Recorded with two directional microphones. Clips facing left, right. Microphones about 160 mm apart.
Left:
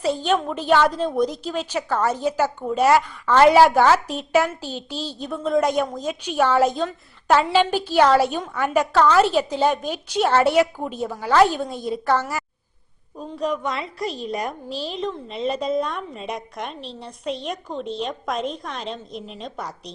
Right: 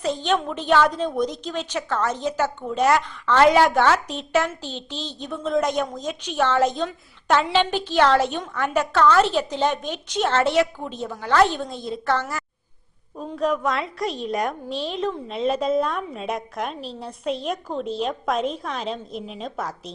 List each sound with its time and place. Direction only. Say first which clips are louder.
0.0 s a woman's voice: left 2 dB; 10° left (ahead or behind)